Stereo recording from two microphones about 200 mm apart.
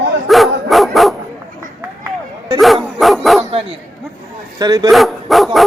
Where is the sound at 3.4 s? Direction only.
30° right (ahead or behind).